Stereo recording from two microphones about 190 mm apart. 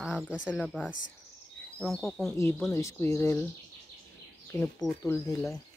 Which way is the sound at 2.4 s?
15° left (ahead or behind).